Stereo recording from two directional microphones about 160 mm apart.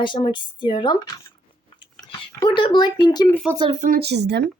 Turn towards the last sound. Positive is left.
turn(degrees=-90)